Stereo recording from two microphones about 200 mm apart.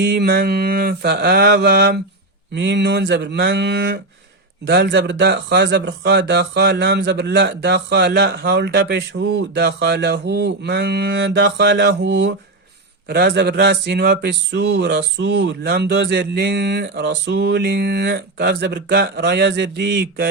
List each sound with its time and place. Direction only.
0.0 s mantra: 55° right (ahead or behind)
2.6 s speech: 60° right (ahead or behind)
13.1 s speech: 50° right (ahead or behind)